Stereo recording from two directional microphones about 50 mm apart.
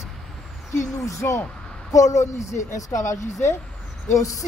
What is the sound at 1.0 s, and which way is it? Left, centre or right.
A woman's voice, left.